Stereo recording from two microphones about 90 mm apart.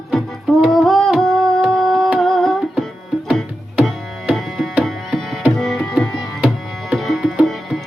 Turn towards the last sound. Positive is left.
turn(degrees=0)  # may be behind; listen again after turning